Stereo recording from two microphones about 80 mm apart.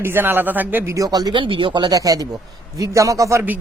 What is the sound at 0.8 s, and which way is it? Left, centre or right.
Speech, right.